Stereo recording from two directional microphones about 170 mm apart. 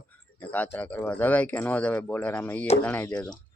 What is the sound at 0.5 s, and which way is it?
Speech, 10° left (ahead or behind).